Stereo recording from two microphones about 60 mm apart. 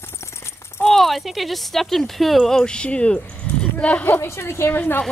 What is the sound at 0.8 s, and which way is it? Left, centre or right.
Speech, centre.